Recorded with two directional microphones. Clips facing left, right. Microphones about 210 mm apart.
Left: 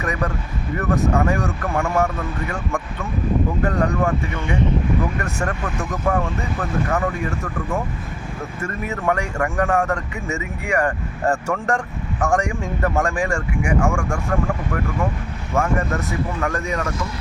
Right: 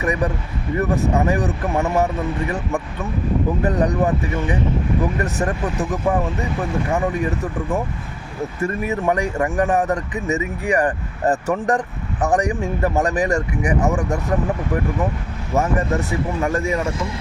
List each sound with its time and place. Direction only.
0.0 s speech: 15° right (ahead or behind)
13.6 s speech: 35° right (ahead or behind)
15.5 s speech: 20° right (ahead or behind)